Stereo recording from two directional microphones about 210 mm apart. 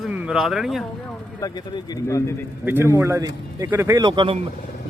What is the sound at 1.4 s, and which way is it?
Speech, 15° left (ahead or behind).